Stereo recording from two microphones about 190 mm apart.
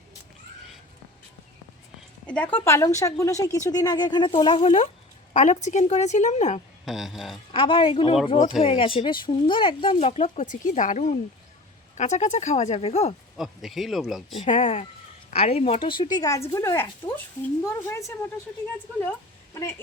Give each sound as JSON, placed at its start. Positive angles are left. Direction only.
{"t": 2.2, "sound": "a woman's voice", "side_deg": 5}
{"t": 6.8, "sound": "speech", "side_deg": 0}
{"t": 7.5, "sound": "a woman's voice", "side_deg": 30}
{"t": 13.3, "sound": "speech", "side_deg": 0}
{"t": 14.4, "sound": "a woman's voice", "side_deg": 35}